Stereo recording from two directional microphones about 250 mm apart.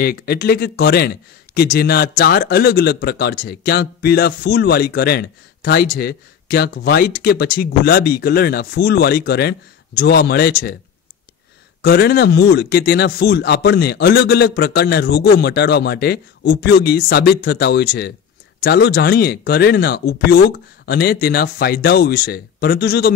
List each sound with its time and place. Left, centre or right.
0.0 s speech: left
11.8 s speech: left